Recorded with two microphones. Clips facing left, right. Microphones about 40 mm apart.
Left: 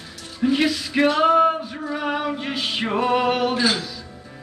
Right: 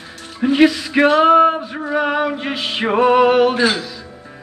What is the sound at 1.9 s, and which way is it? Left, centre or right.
Male singing, right.